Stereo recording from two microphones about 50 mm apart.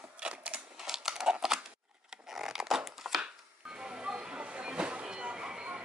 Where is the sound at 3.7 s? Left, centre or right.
Centre.